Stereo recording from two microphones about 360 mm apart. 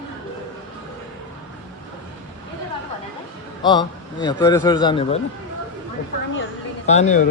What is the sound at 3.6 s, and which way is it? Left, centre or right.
A man's voice, centre.